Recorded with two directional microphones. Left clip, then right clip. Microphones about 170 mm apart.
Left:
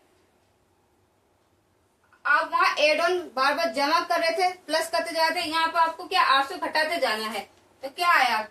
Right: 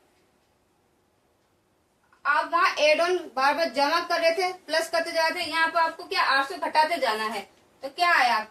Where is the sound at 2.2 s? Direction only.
10° right (ahead or behind).